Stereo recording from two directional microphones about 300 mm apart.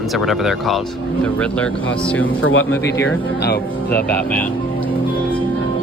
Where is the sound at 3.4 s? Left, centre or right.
Left.